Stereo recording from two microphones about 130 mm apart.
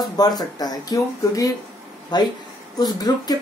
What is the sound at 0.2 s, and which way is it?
Speech, 30° left (ahead or behind).